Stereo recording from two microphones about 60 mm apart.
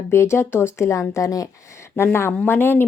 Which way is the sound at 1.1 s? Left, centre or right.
Left.